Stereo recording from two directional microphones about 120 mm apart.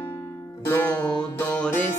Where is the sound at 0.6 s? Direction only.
15° left (ahead or behind).